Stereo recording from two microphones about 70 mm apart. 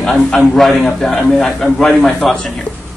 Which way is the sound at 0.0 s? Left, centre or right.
Centre.